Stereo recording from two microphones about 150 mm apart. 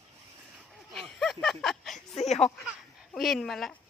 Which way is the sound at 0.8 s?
Centre (ahead or behind).